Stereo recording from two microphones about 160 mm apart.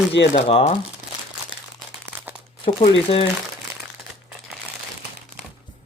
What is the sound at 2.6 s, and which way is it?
Speech, 35° left (ahead or behind).